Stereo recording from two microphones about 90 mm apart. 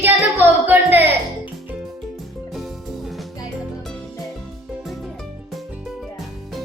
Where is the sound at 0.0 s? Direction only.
20° right (ahead or behind).